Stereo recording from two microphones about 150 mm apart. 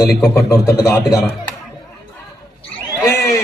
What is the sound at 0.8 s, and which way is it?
Speech, 20° left (ahead or behind).